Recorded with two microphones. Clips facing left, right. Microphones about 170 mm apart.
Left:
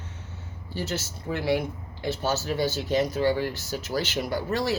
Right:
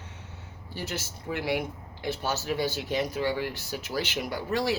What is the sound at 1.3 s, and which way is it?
Speech, 35° left (ahead or behind).